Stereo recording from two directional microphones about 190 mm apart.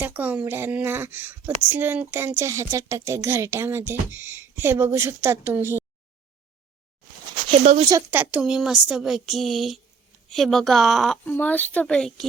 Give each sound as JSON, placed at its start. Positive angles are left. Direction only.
{"t": 0.0, "sound": "speech", "side_deg": -10}
{"t": 7.6, "sound": "speech", "side_deg": -35}
{"t": 7.9, "sound": "speech", "side_deg": -15}